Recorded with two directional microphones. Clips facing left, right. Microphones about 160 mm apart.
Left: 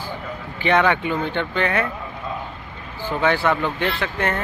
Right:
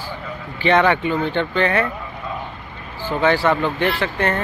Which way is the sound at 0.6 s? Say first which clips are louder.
Right 2 dB; 10° left (ahead or behind).